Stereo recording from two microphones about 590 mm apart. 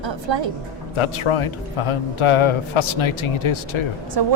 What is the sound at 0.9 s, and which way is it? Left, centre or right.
Speech, left.